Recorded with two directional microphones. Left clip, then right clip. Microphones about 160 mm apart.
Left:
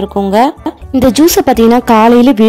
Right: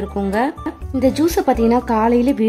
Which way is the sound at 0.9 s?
55° left (ahead or behind).